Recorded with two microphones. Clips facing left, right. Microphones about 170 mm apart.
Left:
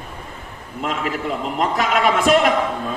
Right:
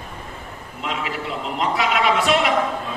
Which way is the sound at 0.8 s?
45° left (ahead or behind).